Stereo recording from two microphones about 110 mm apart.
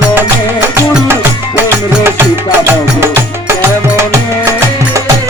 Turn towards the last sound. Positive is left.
turn(degrees=-25)  # may be behind; listen again after turning